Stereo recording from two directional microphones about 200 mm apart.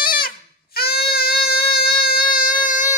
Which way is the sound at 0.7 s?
50° left (ahead or behind).